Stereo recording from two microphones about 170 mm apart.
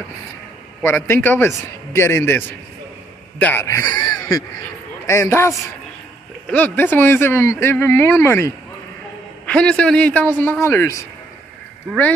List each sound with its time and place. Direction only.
0.8 s speech: 15° left (ahead or behind)
6.5 s speech: 10° left (ahead or behind)